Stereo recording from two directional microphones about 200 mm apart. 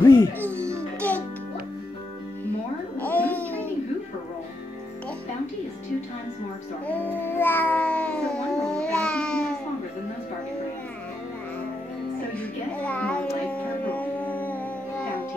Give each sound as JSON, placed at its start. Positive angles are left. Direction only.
{"t": 0.0, "sound": "music", "side_deg": 15}
{"t": 0.5, "sound": "music", "side_deg": -15}
{"t": 3.0, "sound": "music", "side_deg": 10}
{"t": 6.9, "sound": "babbling", "side_deg": 10}
{"t": 12.4, "sound": "music", "side_deg": 5}
{"t": 13.8, "sound": "a sound", "side_deg": 5}